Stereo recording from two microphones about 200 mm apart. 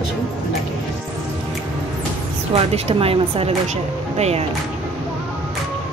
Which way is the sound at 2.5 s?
30° right (ahead or behind).